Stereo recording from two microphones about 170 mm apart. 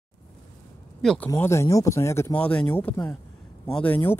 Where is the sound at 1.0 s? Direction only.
5° left (ahead or behind).